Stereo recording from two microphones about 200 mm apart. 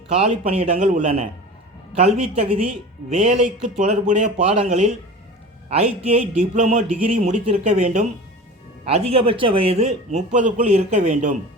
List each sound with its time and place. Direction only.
0.1 s a man's voice: 30° right (ahead or behind)